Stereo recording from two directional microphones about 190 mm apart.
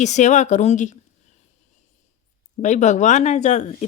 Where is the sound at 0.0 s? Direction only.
40° left (ahead or behind).